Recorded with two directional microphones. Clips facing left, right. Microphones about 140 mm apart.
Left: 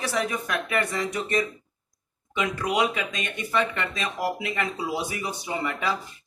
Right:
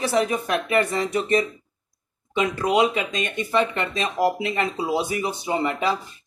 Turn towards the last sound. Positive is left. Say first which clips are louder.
# right 5 dB
turn(degrees=-25)  # may be behind; listen again after turning